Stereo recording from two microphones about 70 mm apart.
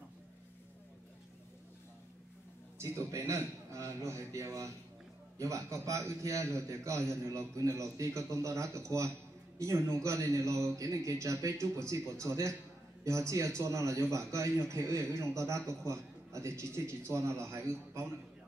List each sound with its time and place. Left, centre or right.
2.8 s a man's voice: right